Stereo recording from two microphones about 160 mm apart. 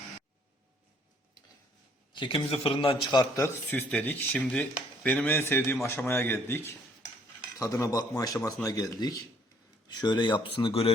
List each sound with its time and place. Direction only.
2.1 s a man's voice: 35° left (ahead or behind)